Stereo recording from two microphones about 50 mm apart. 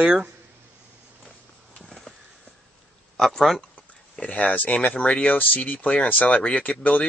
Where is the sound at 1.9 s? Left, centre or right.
Centre.